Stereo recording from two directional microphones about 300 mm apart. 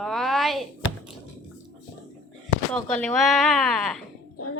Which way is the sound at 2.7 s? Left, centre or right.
Centre.